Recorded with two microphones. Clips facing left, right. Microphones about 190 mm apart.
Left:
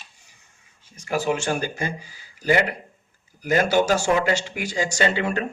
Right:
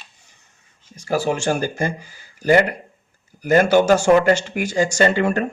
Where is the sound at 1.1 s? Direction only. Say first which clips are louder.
Right 3 dB; 35° right (ahead or behind).